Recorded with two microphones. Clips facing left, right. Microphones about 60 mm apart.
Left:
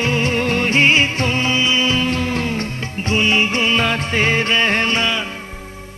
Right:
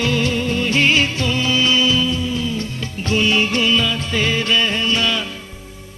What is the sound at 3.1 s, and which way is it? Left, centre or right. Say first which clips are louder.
Music: even; left.